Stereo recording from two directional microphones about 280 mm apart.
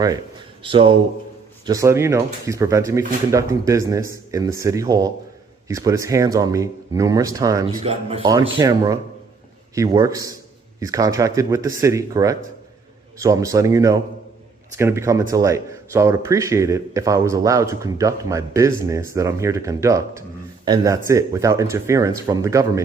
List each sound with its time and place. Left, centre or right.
0.6 s speech: centre